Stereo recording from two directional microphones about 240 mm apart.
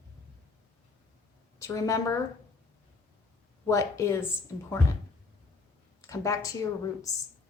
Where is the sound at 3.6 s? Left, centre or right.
Centre.